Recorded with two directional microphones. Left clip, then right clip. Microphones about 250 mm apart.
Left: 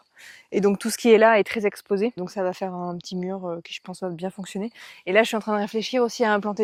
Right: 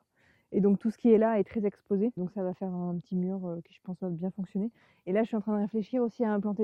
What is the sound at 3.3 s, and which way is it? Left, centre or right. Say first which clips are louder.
Speech: left 8 dB; left.